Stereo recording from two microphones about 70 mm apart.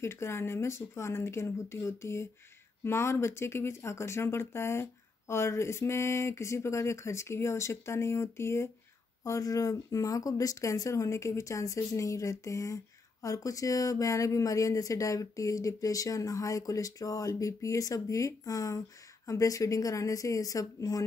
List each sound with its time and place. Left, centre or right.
0.0 s speech: left
9.2 s speech: left